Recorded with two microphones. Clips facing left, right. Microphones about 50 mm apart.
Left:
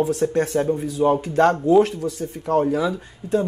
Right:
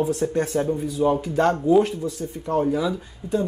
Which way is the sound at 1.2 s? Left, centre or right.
Left.